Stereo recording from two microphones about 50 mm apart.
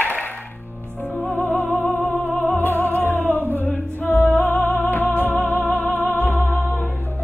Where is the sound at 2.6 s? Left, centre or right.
Left.